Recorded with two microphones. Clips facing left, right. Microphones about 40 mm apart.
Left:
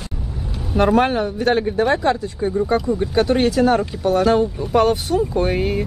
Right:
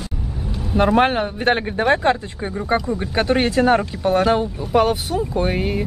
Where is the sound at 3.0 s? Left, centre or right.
Right.